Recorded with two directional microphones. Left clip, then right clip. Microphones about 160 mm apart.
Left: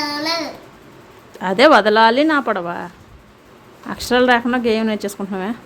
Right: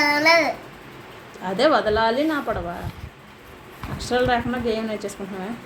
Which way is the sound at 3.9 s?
55° left (ahead or behind).